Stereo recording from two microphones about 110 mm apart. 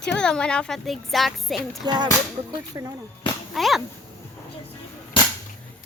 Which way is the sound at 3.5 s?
Centre (ahead or behind).